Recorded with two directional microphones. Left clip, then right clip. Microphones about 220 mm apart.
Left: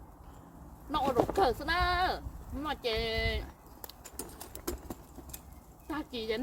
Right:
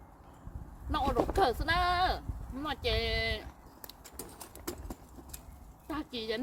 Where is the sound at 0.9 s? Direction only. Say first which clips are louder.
Left 2 dB; 10° right (ahead or behind).